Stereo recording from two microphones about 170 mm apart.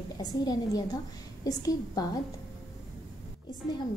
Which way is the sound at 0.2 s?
25° left (ahead or behind).